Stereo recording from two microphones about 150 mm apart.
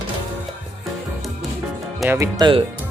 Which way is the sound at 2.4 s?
35° right (ahead or behind).